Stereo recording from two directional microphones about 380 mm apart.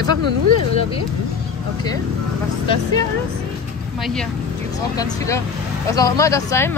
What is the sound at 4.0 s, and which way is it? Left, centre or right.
Speech, centre.